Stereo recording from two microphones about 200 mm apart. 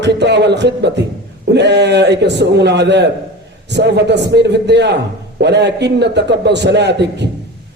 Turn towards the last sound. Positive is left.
turn(degrees=-60)  # may be behind; listen again after turning